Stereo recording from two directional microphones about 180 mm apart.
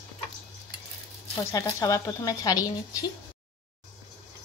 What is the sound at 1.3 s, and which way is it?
Speech, 15° left (ahead or behind).